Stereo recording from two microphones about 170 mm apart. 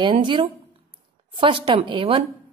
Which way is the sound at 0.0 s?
30° right (ahead or behind).